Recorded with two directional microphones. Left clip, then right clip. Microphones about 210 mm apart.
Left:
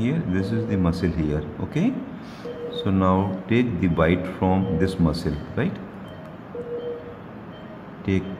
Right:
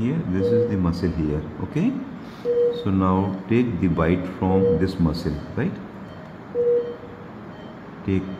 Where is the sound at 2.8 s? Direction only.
5° left (ahead or behind).